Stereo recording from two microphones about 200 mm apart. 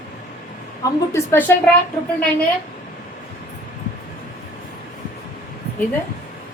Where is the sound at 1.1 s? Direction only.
10° left (ahead or behind).